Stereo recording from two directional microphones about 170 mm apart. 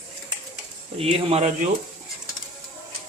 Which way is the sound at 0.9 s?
35° right (ahead or behind).